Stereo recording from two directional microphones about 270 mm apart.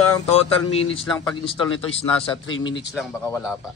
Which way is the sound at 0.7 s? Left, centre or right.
Centre.